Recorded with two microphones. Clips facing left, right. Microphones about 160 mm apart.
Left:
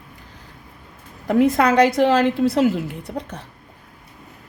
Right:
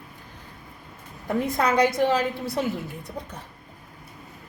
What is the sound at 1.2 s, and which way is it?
A woman's voice, 85° left.